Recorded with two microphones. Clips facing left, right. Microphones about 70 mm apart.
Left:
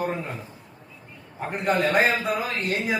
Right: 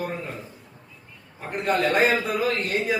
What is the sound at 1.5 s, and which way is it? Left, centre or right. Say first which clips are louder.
A man's voice: even; centre.